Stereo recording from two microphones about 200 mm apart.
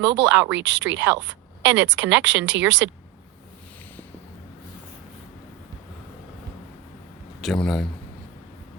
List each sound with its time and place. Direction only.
0.0 s speech: 65° right (ahead or behind)
7.4 s a man's voice: centre (ahead or behind)